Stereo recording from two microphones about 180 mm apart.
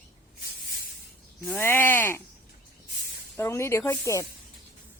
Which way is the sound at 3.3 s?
15° left (ahead or behind).